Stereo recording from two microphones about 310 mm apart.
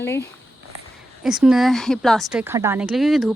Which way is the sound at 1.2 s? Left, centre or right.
Centre.